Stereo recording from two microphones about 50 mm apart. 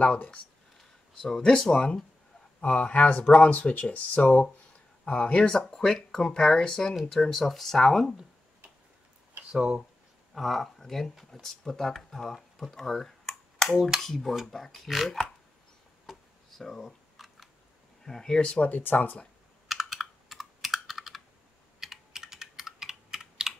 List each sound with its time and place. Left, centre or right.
0.0 s speech: left
1.1 s speech: centre
2.6 s speech: left; by 8.1 s centre
9.5 s speech: centre
10.3 s speech: centre
16.1 s camera: centre
18.0 s speech: centre
18.6 s speech: left
19.7 s computer keyboard: centre